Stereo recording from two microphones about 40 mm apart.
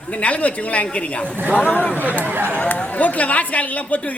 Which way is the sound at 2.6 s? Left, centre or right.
Left.